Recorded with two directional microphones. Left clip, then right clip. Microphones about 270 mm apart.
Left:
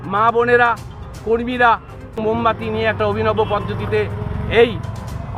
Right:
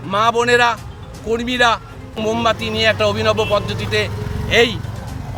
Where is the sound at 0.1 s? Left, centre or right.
Centre.